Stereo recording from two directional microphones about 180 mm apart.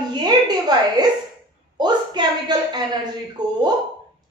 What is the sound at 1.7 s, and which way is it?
A woman's voice, 25° right (ahead or behind).